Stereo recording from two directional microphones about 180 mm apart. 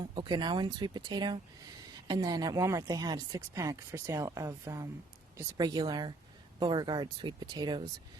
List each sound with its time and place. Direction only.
0.1 s speech: 25° right (ahead or behind)